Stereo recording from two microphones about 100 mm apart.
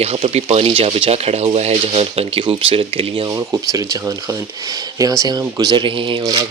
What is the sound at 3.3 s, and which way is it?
Speech, 30° right (ahead or behind).